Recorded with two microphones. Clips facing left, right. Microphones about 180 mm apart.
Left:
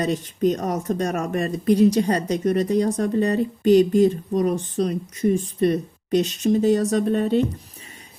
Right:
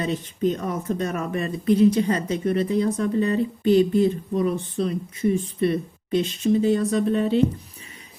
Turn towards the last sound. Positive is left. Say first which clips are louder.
# left 1 dB
turn(degrees=45)  # may be behind; listen again after turning